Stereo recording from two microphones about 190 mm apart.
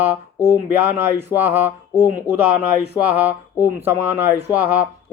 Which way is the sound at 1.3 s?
20° left (ahead or behind).